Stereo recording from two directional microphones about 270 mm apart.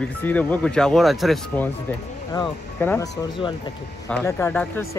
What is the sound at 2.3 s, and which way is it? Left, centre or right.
Speech, centre.